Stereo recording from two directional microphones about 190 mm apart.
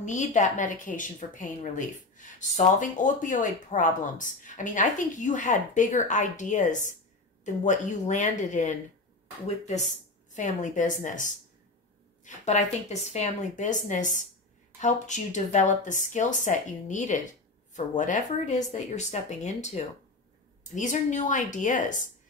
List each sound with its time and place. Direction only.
0.0 s a woman's voice: 40° left (ahead or behind)
10.3 s a woman's voice: 40° left (ahead or behind)